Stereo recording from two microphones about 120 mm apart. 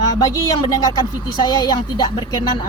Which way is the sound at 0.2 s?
35° left (ahead or behind).